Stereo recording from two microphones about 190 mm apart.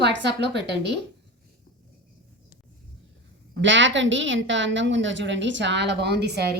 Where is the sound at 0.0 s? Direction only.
65° right (ahead or behind).